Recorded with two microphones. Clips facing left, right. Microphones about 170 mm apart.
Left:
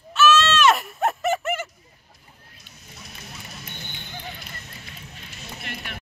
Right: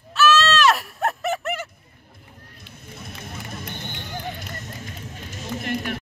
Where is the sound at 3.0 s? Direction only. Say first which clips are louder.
Right 5 dB; 50° right (ahead or behind).